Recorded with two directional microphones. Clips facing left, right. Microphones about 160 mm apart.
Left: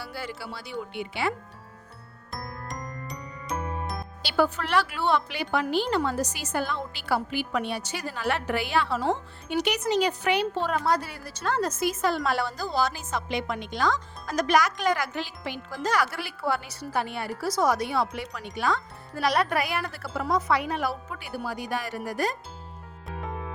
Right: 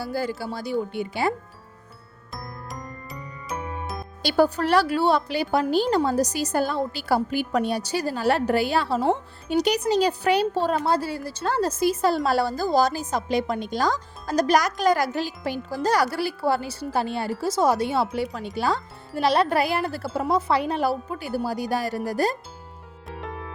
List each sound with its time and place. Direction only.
0.0 s speech: 40° right (ahead or behind)
2.3 s music: centre (ahead or behind)
4.2 s speech: 40° right (ahead or behind)
23.0 s music: centre (ahead or behind)